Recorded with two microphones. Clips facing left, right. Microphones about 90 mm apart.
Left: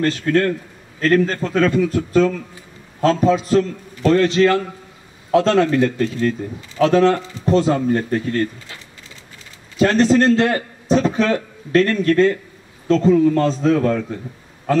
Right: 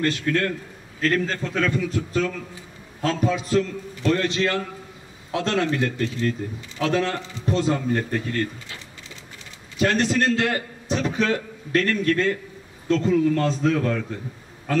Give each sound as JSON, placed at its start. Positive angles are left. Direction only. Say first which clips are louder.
{"t": 0.0, "sound": "speech", "louder": "left 6 dB", "side_deg": 40}
{"t": 9.8, "sound": "a man's voice", "louder": "left 7 dB", "side_deg": 35}